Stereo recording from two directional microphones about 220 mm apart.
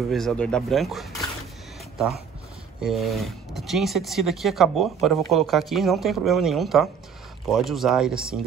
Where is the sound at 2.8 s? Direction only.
Centre (ahead or behind).